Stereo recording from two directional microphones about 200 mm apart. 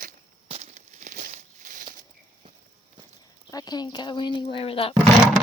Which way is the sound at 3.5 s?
20° left (ahead or behind).